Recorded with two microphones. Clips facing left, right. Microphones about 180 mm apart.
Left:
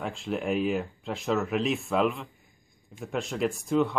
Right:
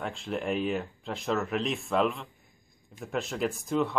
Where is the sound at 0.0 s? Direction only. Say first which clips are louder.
Left 2 dB; centre (ahead or behind).